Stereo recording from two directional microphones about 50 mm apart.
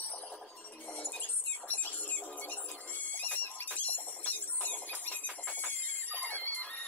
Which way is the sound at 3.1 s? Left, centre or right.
Left.